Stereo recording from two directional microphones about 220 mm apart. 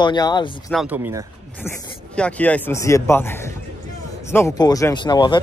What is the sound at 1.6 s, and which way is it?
Speech, 5° left (ahead or behind).